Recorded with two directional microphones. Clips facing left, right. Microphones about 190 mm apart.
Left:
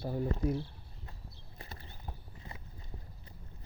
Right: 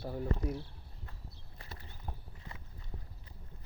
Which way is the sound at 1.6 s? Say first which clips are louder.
Left 2 dB; 25° left (ahead or behind).